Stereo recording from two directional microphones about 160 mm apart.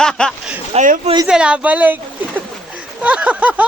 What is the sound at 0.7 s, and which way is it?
Speech, 55° right (ahead or behind).